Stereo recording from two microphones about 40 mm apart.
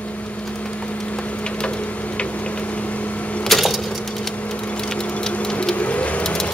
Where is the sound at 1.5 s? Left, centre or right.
Left.